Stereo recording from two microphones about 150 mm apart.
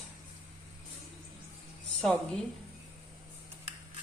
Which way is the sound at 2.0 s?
5° left (ahead or behind).